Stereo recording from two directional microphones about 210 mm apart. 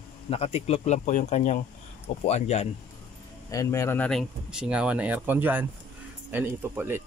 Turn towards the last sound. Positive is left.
turn(degrees=-10)  # may be behind; listen again after turning